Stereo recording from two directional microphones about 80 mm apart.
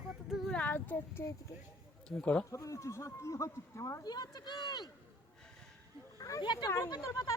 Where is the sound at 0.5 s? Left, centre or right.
Left.